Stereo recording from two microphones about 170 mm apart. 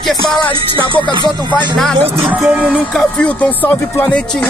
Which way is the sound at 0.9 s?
30° right (ahead or behind).